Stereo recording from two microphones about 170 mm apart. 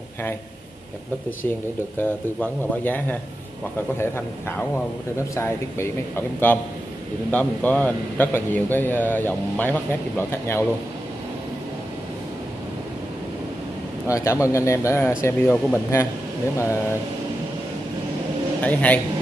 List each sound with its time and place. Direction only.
2.0 s speech: 10° left (ahead or behind)
14.0 s speech: 20° left (ahead or behind)
18.6 s speech: 10° left (ahead or behind)